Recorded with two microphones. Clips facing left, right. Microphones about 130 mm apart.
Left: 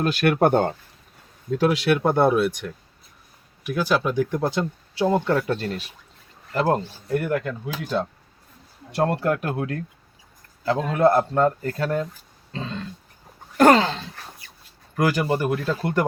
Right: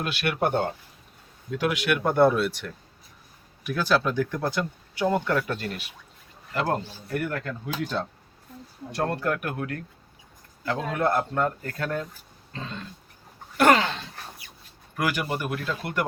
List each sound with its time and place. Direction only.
0.0 s speech: 40° left (ahead or behind)
1.5 s speech: 35° left (ahead or behind)
8.9 s speech: 20° left (ahead or behind)
12.5 s throat clearing: 30° left (ahead or behind)
13.6 s speech: 35° left (ahead or behind)